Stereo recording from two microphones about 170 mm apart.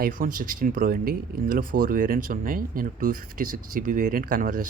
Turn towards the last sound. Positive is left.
turn(degrees=-55)  # may be behind; listen again after turning